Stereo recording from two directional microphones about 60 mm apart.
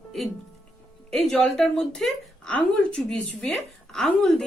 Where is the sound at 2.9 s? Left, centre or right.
Centre.